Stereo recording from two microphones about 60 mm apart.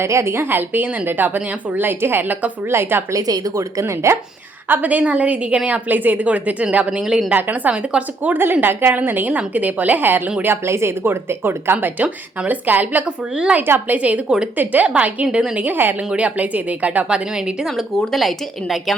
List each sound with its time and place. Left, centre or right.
0.0 s speech: right
2.6 s speech: right
3.1 s speech: right
4.7 s a woman's voice: right
7.0 s speech: centre
7.3 s a woman's voice: right
13.6 s a woman's voice: right
14.5 s a woman's voice: right; by 15.6 s centre
15.6 s a woman's voice: right
17.1 s a woman's voice: centre
17.9 s speech: centre